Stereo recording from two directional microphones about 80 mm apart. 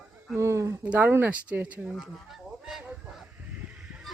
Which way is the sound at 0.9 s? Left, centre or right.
Right.